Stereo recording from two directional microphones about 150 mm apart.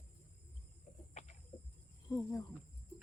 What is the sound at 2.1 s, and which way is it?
Speech, 20° left (ahead or behind).